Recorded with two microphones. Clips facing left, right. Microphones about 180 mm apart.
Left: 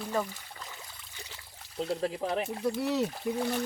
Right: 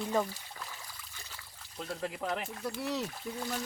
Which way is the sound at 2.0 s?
30° left (ahead or behind).